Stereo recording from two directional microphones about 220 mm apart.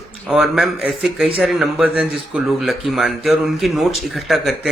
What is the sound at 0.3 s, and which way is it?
Speech, centre (ahead or behind).